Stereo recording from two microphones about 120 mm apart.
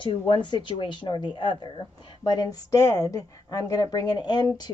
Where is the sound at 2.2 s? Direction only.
30° left (ahead or behind).